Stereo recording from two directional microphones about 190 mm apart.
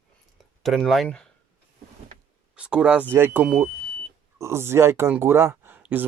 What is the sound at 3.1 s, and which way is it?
Speech, 10° right (ahead or behind).